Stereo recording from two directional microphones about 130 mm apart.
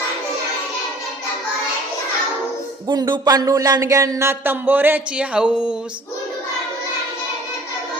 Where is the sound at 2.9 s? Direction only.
35° right (ahead or behind); by 5.8 s 10° right (ahead or behind).